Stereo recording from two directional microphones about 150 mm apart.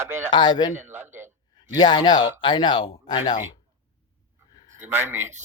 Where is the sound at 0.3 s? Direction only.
30° left (ahead or behind).